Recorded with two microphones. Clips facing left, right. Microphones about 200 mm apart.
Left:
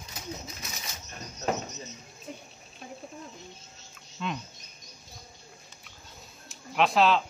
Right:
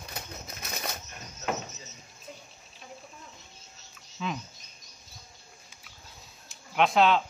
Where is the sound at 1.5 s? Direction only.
Centre (ahead or behind).